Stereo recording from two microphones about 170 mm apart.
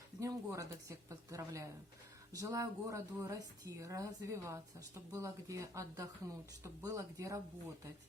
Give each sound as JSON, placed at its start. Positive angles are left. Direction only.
{"t": 0.2, "sound": "a woman's voice", "side_deg": -20}